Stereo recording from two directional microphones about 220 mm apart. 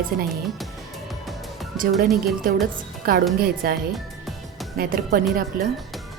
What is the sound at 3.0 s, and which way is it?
Speech, 40° right (ahead or behind).